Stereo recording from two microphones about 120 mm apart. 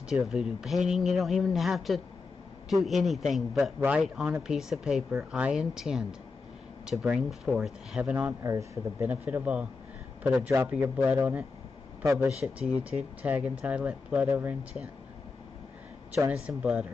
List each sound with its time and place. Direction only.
0.1 s a man's voice: 5° right (ahead or behind); by 12.3 s 25° right (ahead or behind)
12.3 s speech: 60° right (ahead or behind)
12.6 s speech: 10° right (ahead or behind)
16.3 s speech: 10° right (ahead or behind)